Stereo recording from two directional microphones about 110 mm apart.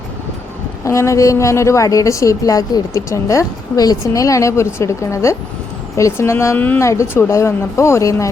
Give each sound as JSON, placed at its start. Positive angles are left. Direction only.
{"t": 0.9, "sound": "a woman's voice", "side_deg": 25}